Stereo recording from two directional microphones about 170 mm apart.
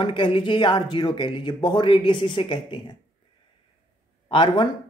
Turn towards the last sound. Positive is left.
turn(degrees=30)  # may be behind; listen again after turning